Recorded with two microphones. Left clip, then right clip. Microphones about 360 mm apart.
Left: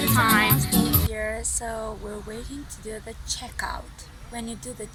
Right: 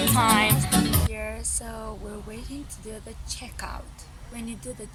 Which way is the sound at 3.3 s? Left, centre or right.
Centre.